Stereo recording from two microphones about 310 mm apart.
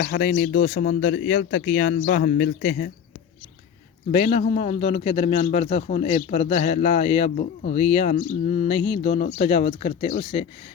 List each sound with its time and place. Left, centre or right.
0.1 s a man's voice: left
4.1 s a man's voice: left